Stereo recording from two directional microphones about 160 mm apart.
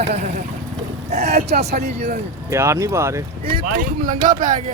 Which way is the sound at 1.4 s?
90° right.